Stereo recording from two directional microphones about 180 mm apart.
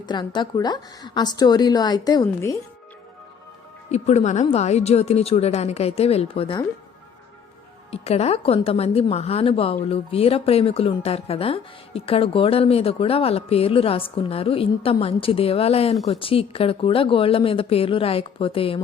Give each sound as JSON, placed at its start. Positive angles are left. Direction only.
{"t": 0.0, "sound": "a woman's voice", "side_deg": 25}
{"t": 3.9, "sound": "speech", "side_deg": 40}
{"t": 7.9, "sound": "speech", "side_deg": 35}